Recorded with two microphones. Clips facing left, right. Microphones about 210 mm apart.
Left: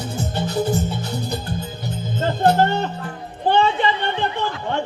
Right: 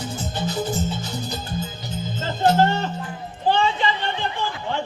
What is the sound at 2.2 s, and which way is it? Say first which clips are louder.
Music: left 2 dB; 55° left (ahead or behind).